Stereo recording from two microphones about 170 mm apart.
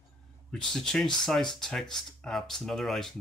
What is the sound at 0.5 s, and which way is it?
Speech, 5° left (ahead or behind).